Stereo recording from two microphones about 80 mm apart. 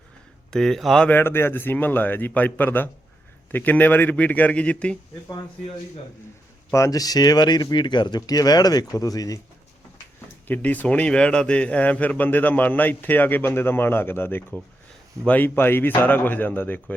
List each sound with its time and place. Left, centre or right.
0.5 s speech: centre
1.1 s a man's voice: left
6.7 s speech: left
10.5 s a man's voice: left